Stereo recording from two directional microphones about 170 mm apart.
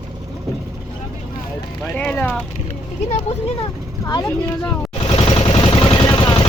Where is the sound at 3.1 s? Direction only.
40° left (ahead or behind).